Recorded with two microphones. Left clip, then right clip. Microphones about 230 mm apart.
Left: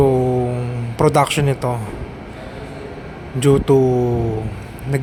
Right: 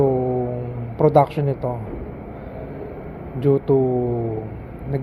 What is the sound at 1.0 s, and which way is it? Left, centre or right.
Mantra, left.